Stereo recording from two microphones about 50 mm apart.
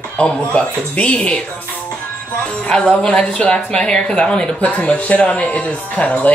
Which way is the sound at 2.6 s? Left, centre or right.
Centre.